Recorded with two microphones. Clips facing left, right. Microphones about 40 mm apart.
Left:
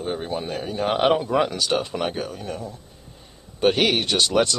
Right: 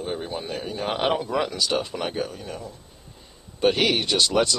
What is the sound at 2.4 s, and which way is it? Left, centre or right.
Speech, left.